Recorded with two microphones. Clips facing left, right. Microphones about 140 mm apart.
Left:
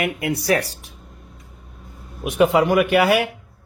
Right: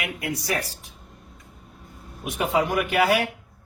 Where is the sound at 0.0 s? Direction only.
60° left (ahead or behind).